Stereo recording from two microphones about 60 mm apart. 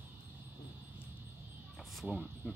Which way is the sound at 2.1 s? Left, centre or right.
Right.